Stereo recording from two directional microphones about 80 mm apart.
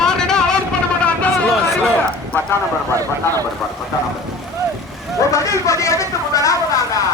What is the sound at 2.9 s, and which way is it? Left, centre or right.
Speech, right.